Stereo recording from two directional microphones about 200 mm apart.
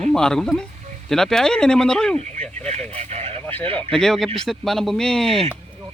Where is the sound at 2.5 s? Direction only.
35° right (ahead or behind).